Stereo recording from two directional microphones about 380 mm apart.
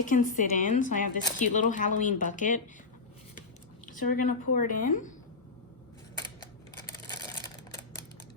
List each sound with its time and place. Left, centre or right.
0.0 s speech: centre
4.0 s speech: left
4.5 s speech: left
7.1 s a sound: centre